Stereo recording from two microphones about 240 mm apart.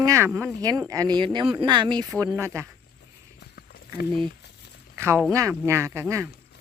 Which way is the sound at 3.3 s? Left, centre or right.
Left.